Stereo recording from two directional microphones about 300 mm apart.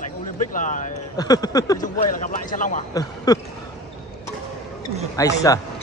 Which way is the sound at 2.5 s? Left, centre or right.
Left.